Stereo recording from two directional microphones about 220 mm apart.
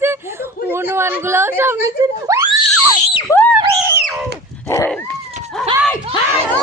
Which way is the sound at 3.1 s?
15° left (ahead or behind).